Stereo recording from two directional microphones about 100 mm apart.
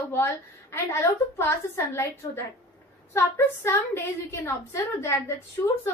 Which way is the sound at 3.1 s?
25° left (ahead or behind).